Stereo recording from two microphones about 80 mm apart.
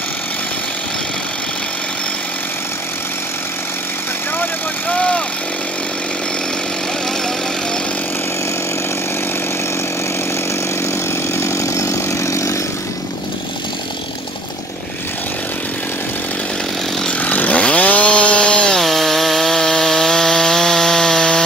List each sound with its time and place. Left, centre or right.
4.4 s vehicle: centre
11.3 s chainsaw: left
17.2 s chainsaw: centre